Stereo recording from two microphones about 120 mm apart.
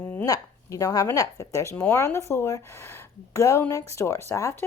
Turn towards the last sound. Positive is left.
turn(degrees=20)  # may be behind; listen again after turning